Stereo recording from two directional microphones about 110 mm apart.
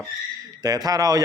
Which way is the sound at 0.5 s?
35° right (ahead or behind).